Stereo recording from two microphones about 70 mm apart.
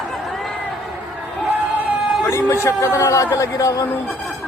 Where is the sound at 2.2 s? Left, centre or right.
Left.